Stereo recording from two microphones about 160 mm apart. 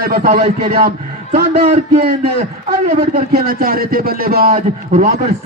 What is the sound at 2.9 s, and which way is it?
Speech, 60° right (ahead or behind).